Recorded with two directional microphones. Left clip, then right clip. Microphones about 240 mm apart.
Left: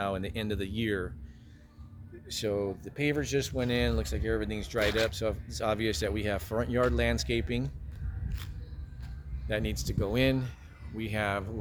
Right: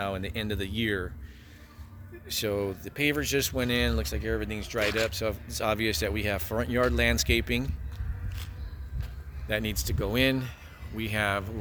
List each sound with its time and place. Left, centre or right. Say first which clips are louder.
0.0 s speech: right 1 dB; centre
2.2 s speech: right 2 dB; centre
9.5 s speech: right 3 dB; centre